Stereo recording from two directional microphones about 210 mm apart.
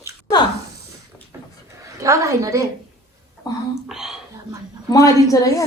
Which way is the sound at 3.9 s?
Centre (ahead or behind).